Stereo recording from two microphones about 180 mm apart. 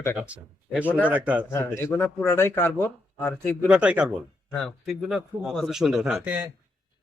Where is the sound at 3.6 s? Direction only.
5° right (ahead or behind).